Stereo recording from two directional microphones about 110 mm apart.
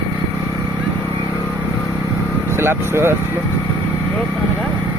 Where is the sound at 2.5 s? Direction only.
20° right (ahead or behind).